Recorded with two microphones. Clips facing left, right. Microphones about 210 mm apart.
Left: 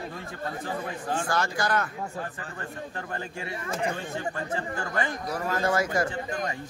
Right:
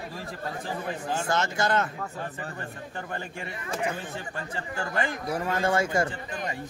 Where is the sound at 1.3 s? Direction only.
25° right (ahead or behind).